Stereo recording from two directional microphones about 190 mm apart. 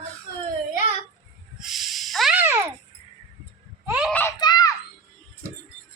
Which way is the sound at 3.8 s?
5° right (ahead or behind).